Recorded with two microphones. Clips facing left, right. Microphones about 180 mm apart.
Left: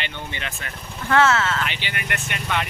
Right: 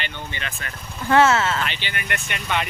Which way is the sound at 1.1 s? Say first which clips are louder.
Right 2 dB; 15° right (ahead or behind).